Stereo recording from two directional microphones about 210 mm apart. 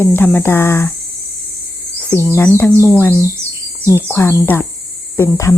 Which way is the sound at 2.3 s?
10° left (ahead or behind).